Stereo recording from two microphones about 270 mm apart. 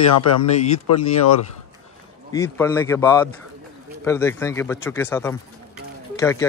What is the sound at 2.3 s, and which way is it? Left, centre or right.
Speech, centre.